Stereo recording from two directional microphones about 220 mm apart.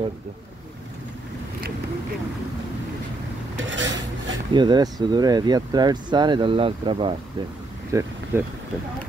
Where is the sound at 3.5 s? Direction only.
55° right (ahead or behind).